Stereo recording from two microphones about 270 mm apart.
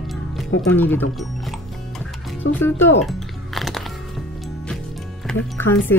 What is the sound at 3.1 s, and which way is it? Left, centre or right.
Music, centre.